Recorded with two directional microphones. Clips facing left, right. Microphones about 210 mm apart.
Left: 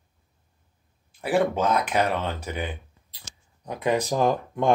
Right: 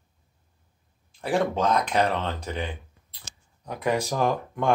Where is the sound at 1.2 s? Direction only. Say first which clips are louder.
Left 2 dB; 5° left (ahead or behind).